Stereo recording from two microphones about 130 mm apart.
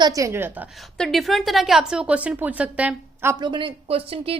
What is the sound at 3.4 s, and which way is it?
Speech, 40° right (ahead or behind).